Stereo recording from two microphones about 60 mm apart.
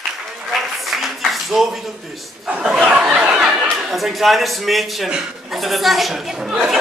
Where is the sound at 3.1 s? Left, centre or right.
Centre.